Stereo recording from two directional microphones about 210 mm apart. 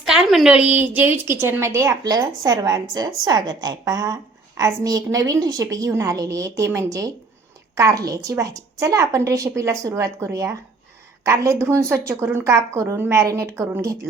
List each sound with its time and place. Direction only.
0.0 s a woman's voice: centre (ahead or behind)